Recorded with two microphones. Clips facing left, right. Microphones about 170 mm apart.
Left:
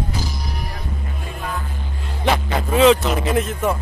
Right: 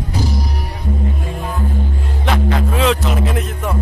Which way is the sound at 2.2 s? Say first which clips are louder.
Right 1 dB; centre (ahead or behind).